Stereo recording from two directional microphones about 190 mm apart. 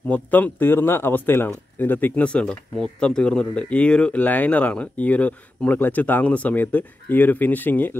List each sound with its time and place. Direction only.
0.1 s speech: 10° left (ahead or behind)